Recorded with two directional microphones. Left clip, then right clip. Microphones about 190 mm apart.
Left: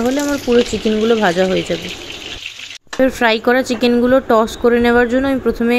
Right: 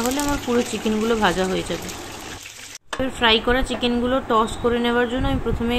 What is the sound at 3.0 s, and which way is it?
Speech, 35° left (ahead or behind).